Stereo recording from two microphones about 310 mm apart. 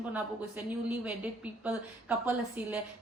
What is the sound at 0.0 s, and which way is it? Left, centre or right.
Speech, centre.